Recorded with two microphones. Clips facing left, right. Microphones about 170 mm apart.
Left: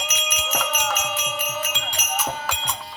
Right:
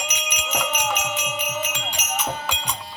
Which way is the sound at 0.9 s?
10° right (ahead or behind).